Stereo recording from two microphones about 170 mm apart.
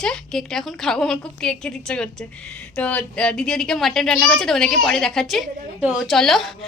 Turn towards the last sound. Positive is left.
turn(degrees=0)  # may be behind; listen again after turning